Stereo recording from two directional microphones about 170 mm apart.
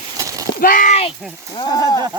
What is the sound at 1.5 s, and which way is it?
Speech, 25° left (ahead or behind).